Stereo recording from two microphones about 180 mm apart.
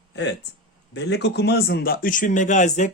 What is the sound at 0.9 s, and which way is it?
A man's voice, 70° left (ahead or behind).